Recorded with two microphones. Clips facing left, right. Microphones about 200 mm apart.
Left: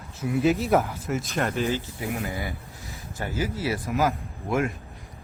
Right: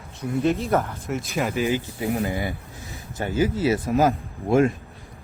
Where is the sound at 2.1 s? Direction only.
30° right (ahead or behind).